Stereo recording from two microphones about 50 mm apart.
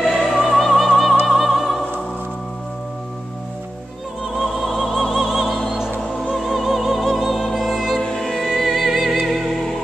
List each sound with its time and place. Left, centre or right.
0.0 s music: centre
4.6 s opera: centre
5.2 s music: centre
8.0 s music: centre